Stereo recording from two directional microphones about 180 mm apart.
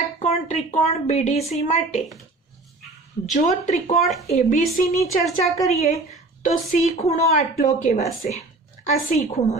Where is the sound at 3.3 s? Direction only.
40° left (ahead or behind).